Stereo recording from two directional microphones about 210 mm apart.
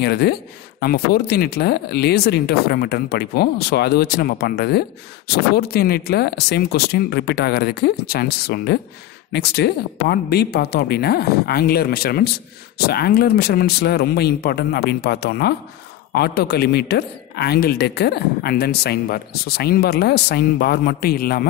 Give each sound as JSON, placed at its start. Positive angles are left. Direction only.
{"t": 0.0, "sound": "a man's voice", "side_deg": 50}